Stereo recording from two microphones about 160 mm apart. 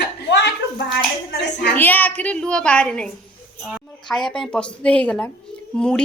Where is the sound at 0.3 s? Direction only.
90° left.